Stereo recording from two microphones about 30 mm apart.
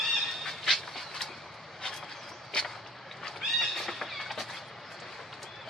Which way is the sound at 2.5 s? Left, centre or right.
Left.